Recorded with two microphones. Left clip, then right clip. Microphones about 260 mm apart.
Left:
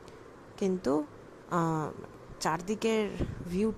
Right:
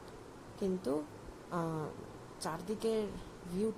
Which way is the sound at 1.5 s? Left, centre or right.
Left.